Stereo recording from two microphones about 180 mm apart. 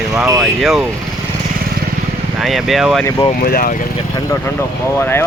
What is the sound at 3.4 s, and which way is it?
Speech, 55° left (ahead or behind).